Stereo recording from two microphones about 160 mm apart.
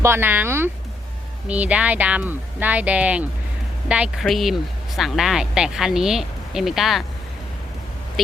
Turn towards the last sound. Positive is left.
turn(degrees=0)  # may be behind; listen again after turning